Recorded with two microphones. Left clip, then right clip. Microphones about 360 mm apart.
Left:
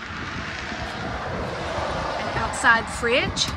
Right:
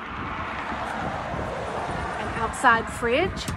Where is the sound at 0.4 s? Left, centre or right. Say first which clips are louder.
Right 1 dB; centre.